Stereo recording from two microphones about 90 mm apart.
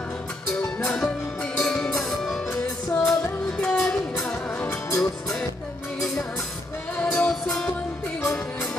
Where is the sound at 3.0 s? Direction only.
5° left (ahead or behind).